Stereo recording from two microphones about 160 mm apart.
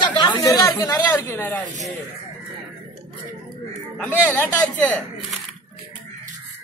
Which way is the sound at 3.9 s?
10° left (ahead or behind).